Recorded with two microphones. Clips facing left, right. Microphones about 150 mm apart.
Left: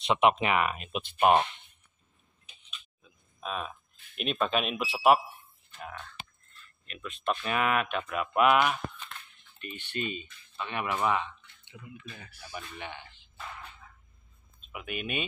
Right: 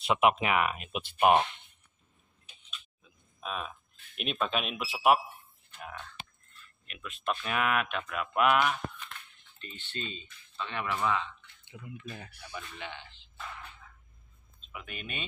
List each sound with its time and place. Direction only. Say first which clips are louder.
0.0 s speech: left 1 dB; 5° right (ahead or behind)
3.0 s speech: left 3 dB; centre (ahead or behind); by 11.2 s 20° left (ahead or behind)
11.7 s speech: right 2 dB; 35° right (ahead or behind)
12.5 s speech: left 1 dB; 15° left (ahead or behind)
14.7 s speech: left 7 dB; 10° left (ahead or behind)